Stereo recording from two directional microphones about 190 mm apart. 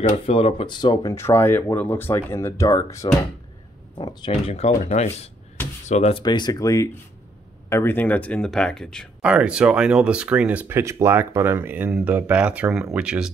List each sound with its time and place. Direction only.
0.3 s speech: 30° left (ahead or behind); by 13.3 s 5° right (ahead or behind)